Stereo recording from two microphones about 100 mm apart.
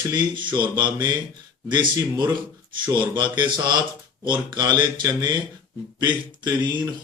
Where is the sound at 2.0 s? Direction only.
35° right (ahead or behind).